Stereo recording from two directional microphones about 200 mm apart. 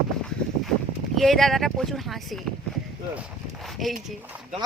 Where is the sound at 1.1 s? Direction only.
Centre (ahead or behind).